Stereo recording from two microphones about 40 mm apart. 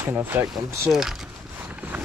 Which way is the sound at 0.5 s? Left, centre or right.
Centre.